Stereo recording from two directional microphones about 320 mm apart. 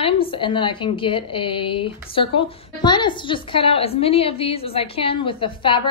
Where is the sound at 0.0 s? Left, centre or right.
Centre.